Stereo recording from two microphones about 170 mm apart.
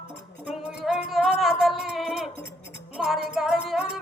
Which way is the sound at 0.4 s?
5° right (ahead or behind).